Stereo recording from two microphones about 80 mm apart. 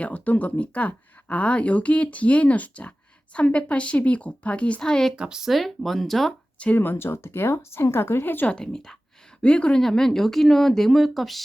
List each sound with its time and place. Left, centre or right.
0.0 s speech: centre
5.1 s speech: centre
6.6 s speech: left
8.5 s speech: centre